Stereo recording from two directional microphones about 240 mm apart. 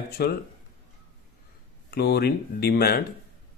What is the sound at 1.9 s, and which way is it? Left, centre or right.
Speech, left.